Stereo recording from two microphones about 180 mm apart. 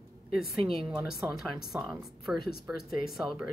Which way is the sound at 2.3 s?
60° left (ahead or behind).